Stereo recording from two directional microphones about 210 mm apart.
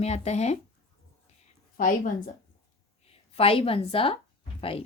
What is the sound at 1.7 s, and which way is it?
Speech, 40° left (ahead or behind).